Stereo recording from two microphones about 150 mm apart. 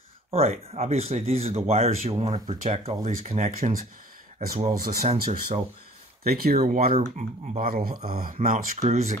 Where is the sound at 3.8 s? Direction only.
65° right (ahead or behind).